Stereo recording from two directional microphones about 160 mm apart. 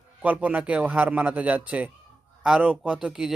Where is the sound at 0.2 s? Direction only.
10° right (ahead or behind).